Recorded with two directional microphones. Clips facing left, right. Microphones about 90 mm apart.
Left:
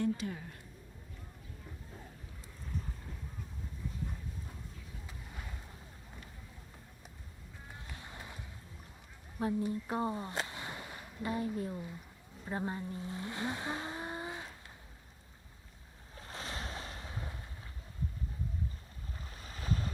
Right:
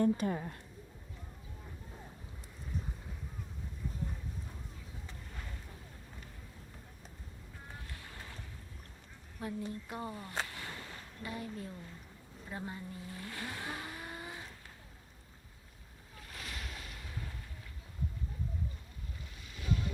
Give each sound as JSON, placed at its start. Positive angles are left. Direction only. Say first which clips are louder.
{"t": 0.0, "sound": "a woman's voice", "louder": "right 4 dB", "side_deg": -45}
{"t": 5.0, "sound": "boat", "louder": "left 1 dB", "side_deg": 10}
{"t": 7.9, "sound": "vehicle", "louder": "left 1 dB", "side_deg": 20}
{"t": 9.4, "sound": "speech", "louder": "left 6 dB", "side_deg": 30}
{"t": 9.8, "sound": "a sound", "louder": "left 7 dB", "side_deg": 30}
{"t": 11.2, "sound": "speech", "louder": "left 7 dB", "side_deg": 25}
{"t": 16.1, "sound": "waves", "louder": "left 4 dB", "side_deg": 30}
{"t": 19.4, "sound": "boat", "louder": "right 1 dB", "side_deg": 40}